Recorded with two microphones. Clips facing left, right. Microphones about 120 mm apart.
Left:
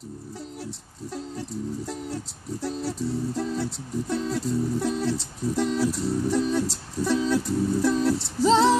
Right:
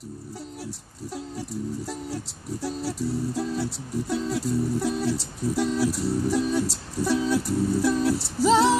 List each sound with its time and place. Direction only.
0.7 s music: 10° right (ahead or behind)